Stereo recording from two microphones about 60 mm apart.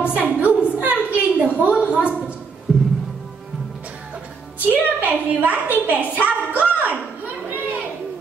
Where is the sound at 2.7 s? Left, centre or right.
Centre.